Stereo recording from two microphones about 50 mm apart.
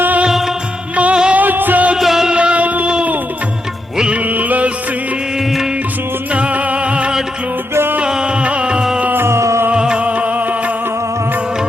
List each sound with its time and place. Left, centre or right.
0.3 s music: centre
0.9 s music: right
1.4 s music: right
2.0 s music: centre
2.3 s music: right
3.9 s music: centre
4.3 s music: right
6.3 s music: right
9.2 s music: right
9.7 s music: centre